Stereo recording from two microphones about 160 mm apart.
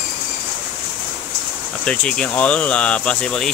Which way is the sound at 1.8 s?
10° left (ahead or behind).